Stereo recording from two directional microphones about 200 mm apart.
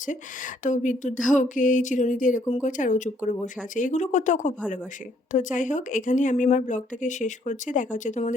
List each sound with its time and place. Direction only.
0.0 s speech: 40° left (ahead or behind)